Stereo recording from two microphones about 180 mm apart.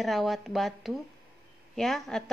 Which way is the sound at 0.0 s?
Centre (ahead or behind).